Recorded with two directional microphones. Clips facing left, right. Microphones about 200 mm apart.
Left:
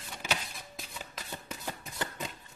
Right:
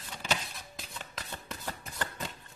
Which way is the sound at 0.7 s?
5° left (ahead or behind).